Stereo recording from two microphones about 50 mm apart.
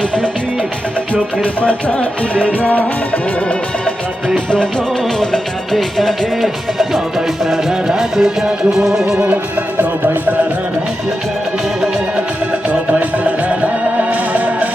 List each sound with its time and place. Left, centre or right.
1.1 s music: left
5.7 s speech: centre
7.5 s music: centre
9.1 s music: right
12.9 s music: right